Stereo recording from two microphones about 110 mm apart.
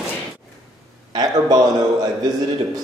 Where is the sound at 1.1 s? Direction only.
40° right (ahead or behind).